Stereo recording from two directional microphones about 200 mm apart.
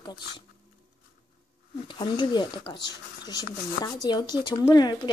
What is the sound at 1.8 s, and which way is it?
Speech, 20° left (ahead or behind).